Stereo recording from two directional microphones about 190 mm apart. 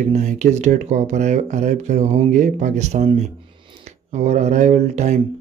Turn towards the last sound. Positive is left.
turn(degrees=-40)  # may be behind; listen again after turning